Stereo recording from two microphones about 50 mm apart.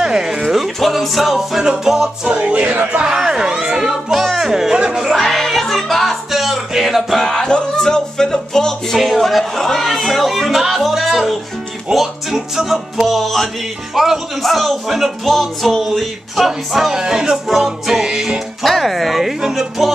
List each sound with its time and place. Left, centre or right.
0.0 s a sound: centre
0.9 s speech: centre
2.2 s music: right
3.0 s speech: centre
5.1 s music: centre
7.4 s music: centre
8.9 s a sound: centre
11.9 s speech: centre
18.6 s speech: centre
19.4 s speech: centre